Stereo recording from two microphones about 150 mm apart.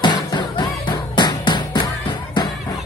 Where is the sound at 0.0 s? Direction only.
30° left (ahead or behind).